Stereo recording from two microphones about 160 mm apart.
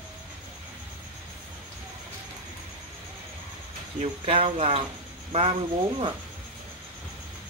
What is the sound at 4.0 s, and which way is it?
Speech, 40° right (ahead or behind).